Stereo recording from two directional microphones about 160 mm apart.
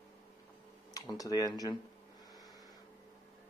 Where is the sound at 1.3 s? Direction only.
25° left (ahead or behind).